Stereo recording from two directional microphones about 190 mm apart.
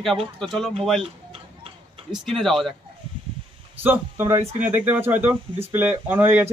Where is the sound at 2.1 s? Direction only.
Centre (ahead or behind).